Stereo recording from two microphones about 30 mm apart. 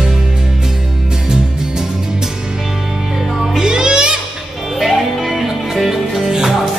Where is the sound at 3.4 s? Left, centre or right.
Centre.